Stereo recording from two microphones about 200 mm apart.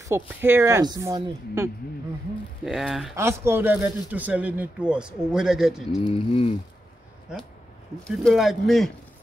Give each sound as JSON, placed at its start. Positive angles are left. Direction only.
{"t": 0.0, "sound": "speech", "side_deg": -10}
{"t": 2.6, "sound": "speech", "side_deg": 0}
{"t": 3.2, "sound": "speech", "side_deg": -15}
{"t": 6.0, "sound": "speech", "side_deg": 25}
{"t": 8.0, "sound": "speech", "side_deg": 5}